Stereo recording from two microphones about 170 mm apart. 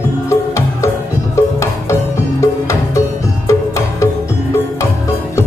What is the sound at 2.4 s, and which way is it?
Music, 15° left (ahead or behind).